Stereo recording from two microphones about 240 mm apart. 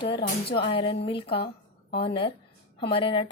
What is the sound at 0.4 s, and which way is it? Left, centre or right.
Speech, left.